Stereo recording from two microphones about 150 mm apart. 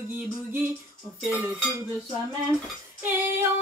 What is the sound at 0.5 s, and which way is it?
Music, 15° right (ahead or behind).